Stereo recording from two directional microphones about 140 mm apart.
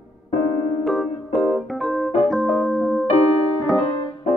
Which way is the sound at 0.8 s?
Centre (ahead or behind).